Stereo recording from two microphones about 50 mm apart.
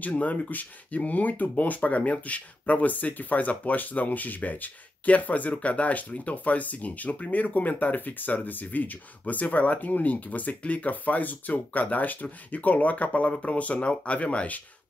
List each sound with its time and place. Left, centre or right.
0.0 s speech: left